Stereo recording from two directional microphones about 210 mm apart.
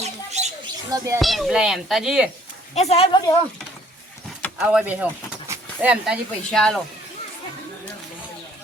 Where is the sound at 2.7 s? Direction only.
30° left (ahead or behind).